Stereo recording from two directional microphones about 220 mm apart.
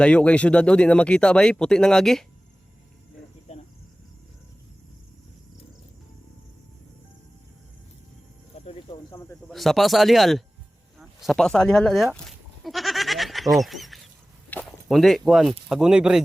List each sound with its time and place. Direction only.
0.0 s speech: 5° left (ahead or behind)
3.5 s cricket: 30° left (ahead or behind)
8.5 s a sound: 25° left (ahead or behind)
9.0 s snake: 15° left (ahead or behind)
9.5 s speech: centre (ahead or behind)
12.6 s goat: centre (ahead or behind)
14.5 s speech: centre (ahead or behind)